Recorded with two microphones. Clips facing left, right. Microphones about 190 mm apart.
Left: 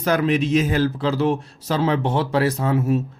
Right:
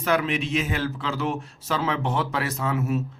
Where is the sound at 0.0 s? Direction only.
40° left (ahead or behind).